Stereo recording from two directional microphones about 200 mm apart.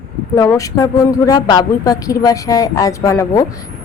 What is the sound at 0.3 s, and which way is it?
A woman's voice, 15° left (ahead or behind).